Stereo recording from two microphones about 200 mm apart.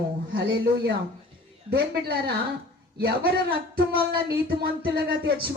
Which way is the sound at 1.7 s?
55° right (ahead or behind).